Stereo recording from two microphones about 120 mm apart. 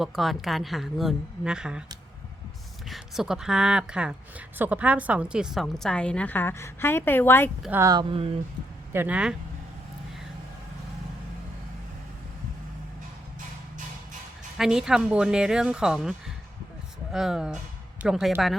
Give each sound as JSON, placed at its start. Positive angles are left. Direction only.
{"t": 0.0, "sound": "a woman's voice", "side_deg": 0}
{"t": 2.9, "sound": "a woman's voice", "side_deg": -5}
{"t": 8.1, "sound": "speech", "side_deg": -50}
{"t": 8.9, "sound": "speech", "side_deg": -15}
{"t": 14.6, "sound": "a woman's voice", "side_deg": -5}